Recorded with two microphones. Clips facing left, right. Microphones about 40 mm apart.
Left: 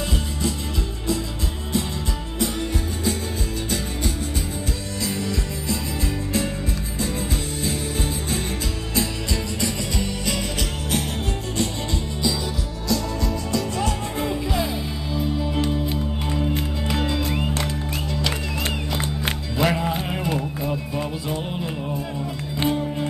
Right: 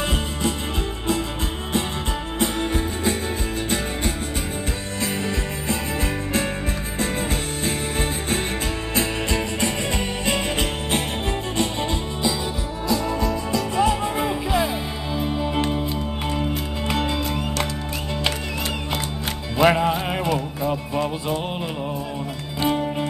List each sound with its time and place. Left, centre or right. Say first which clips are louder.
5.0 s music: right 1 dB; right
8.9 s music: right 2 dB; right
12.8 s music: right 2 dB; right
19.6 s music: right 5 dB; right
22.7 s music: right 2 dB; right